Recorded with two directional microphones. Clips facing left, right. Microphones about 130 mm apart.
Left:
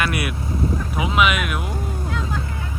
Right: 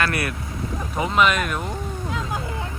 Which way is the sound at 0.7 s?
5° left (ahead or behind).